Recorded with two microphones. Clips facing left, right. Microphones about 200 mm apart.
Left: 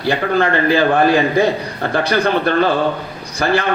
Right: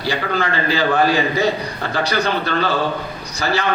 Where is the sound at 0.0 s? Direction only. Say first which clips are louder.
Left 5 dB; 55° left (ahead or behind).